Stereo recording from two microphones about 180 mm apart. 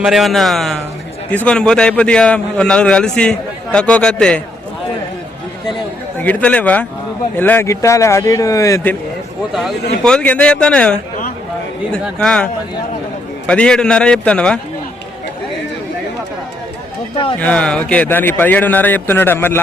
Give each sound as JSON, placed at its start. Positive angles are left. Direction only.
{"t": 0.0, "sound": "a man's voice", "side_deg": 0}
{"t": 6.1, "sound": "a man's voice", "side_deg": 10}
{"t": 9.5, "sound": "a man's voice", "side_deg": 0}
{"t": 12.0, "sound": "a man's voice", "side_deg": 5}
{"t": 13.5, "sound": "a man's voice", "side_deg": 5}
{"t": 17.4, "sound": "a man's voice", "side_deg": 5}